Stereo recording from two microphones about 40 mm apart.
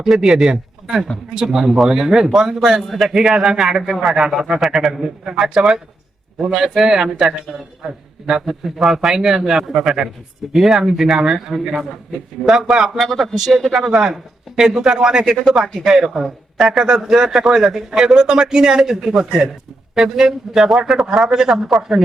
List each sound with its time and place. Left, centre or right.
0.0 s a man's voice: centre
2.8 s a man's voice: centre
5.2 s a man's voice: centre
13.0 s a man's voice: centre
13.3 s a man's voice: centre